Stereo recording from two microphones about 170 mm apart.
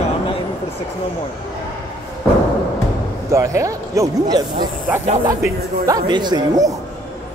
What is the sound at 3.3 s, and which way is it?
Speech, 15° right (ahead or behind).